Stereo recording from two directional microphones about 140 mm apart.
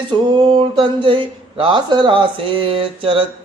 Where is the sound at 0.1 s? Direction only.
35° right (ahead or behind).